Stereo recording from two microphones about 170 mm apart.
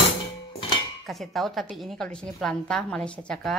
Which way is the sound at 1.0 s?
Centre (ahead or behind).